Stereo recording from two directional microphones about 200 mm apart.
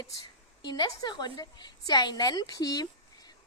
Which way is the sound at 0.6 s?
20° left (ahead or behind).